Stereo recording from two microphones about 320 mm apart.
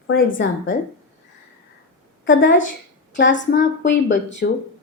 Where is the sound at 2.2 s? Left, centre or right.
Left.